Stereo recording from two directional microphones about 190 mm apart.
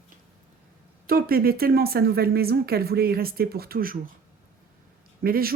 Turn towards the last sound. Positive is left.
turn(degrees=-50)  # may be behind; listen again after turning